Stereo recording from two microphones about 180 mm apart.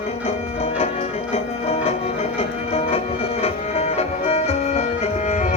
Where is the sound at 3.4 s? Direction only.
35° left (ahead or behind).